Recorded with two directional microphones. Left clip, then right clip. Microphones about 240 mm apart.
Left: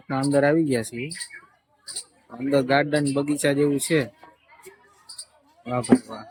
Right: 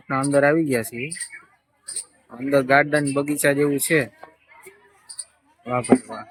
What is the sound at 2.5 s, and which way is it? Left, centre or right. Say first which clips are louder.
Speech: right 4 dB; centre.